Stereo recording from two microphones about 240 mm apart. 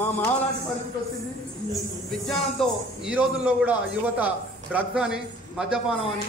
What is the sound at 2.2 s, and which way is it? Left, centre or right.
A man's voice, centre.